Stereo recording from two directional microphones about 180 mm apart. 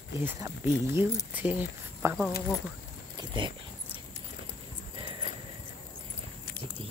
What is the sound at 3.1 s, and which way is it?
Speech, 25° right (ahead or behind).